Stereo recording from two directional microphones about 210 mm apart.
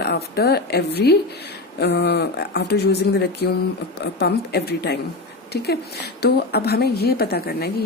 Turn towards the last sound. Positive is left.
turn(degrees=45)  # may be behind; listen again after turning